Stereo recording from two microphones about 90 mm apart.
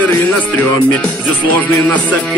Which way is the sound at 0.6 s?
15° left (ahead or behind).